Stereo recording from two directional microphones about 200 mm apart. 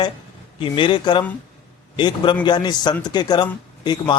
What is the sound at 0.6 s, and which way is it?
Speech, 25° left (ahead or behind).